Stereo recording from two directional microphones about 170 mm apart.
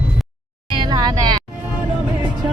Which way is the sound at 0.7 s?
25° right (ahead or behind).